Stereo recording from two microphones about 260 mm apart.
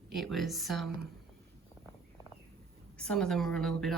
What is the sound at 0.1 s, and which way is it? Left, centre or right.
Speech, centre.